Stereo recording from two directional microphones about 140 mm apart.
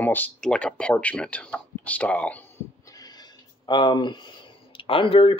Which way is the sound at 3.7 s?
30° left (ahead or behind).